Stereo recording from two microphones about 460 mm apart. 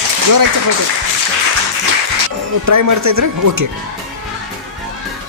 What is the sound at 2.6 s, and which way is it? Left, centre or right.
Speech, right.